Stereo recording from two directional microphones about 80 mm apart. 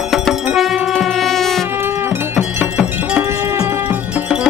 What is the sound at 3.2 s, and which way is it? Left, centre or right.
Music, right.